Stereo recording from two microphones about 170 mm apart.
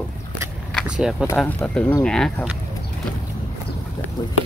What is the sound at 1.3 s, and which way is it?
Speech, 5° left (ahead or behind).